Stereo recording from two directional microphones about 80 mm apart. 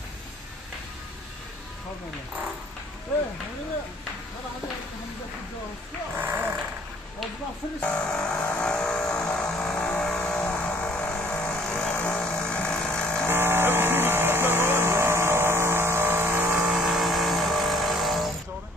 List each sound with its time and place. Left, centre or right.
6.1 s sheep: right
7.8 s vehicle: centre
13.3 s vehicle: right
16.7 s vehicle: centre